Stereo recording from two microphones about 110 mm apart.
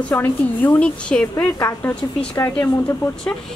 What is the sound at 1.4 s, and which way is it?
Speech, 20° left (ahead or behind).